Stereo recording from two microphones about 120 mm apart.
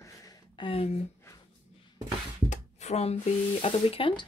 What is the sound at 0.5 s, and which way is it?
Speech, 50° left (ahead or behind).